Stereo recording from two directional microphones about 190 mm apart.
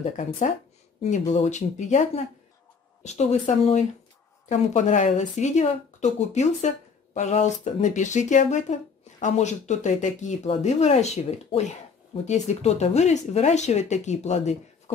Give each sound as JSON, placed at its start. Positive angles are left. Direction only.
{"t": 1.1, "sound": "speech", "side_deg": 35}